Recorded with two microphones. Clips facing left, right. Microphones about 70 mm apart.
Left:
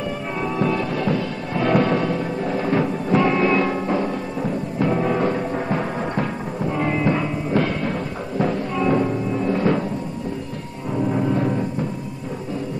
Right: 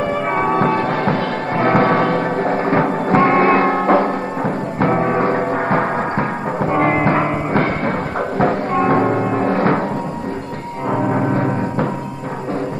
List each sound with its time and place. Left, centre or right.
0.4 s music: right
10.9 s music: right